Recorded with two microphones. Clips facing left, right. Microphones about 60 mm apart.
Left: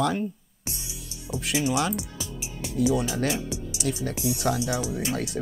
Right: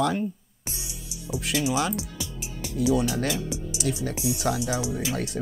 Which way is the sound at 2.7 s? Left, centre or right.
Centre.